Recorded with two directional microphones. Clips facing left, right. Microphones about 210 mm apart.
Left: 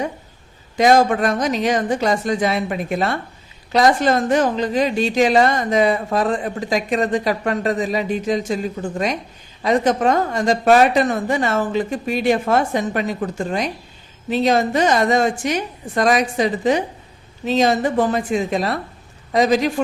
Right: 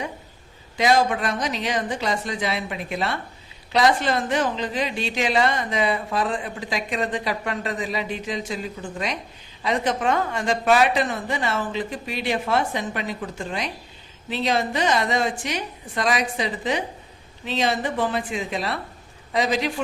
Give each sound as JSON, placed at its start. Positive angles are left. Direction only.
{"t": 0.8, "sound": "a woman's voice", "side_deg": 45}